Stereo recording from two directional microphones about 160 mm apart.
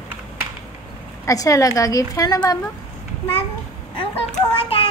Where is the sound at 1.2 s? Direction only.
20° left (ahead or behind).